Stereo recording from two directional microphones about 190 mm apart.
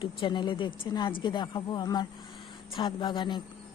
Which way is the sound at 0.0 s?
25° left (ahead or behind).